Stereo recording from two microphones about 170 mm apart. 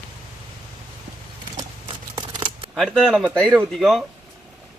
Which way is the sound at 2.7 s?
Centre (ahead or behind).